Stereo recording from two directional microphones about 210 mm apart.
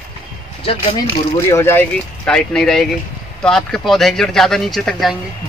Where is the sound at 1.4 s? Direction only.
10° left (ahead or behind).